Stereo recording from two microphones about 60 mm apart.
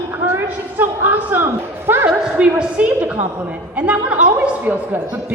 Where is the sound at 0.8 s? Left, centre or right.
Right.